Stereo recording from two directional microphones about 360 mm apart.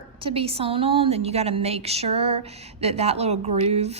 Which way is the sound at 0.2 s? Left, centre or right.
Centre.